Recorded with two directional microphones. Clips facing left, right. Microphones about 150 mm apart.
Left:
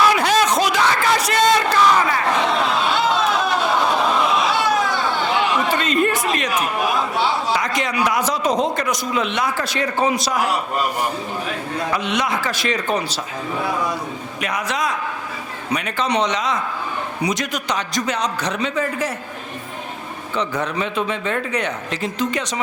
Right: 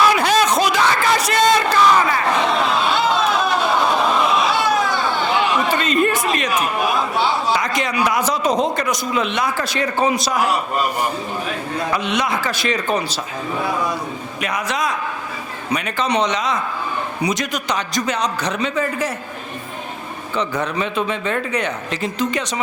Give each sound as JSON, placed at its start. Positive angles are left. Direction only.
{"t": 0.0, "sound": "crowd", "side_deg": -10}
{"t": 8.7, "sound": "a man's voice", "side_deg": -10}
{"t": 20.3, "sound": "a man's voice", "side_deg": -15}